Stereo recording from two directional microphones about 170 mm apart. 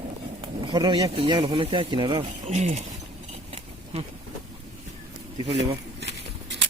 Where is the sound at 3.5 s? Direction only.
40° right (ahead or behind).